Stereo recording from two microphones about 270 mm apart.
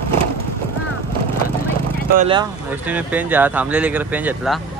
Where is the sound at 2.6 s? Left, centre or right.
Centre.